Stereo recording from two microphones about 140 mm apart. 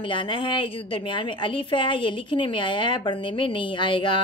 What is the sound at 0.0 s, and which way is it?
A woman's voice, 40° left (ahead or behind).